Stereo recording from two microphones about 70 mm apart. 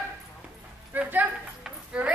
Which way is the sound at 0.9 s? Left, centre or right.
Right.